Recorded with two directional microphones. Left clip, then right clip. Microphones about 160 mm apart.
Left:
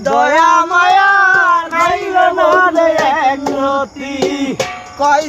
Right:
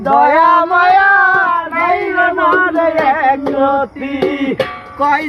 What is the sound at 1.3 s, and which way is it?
Cat, 10° right (ahead or behind).